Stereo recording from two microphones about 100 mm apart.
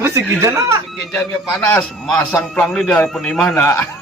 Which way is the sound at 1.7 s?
5° left (ahead or behind).